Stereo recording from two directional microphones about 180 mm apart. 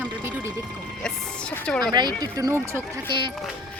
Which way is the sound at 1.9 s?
20° right (ahead or behind).